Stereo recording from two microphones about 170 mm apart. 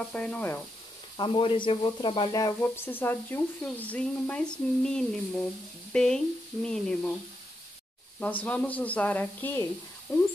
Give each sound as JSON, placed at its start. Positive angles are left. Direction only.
{"t": 0.1, "sound": "speech", "side_deg": 10}
{"t": 1.1, "sound": "speech", "side_deg": 30}
{"t": 8.2, "sound": "speech", "side_deg": 10}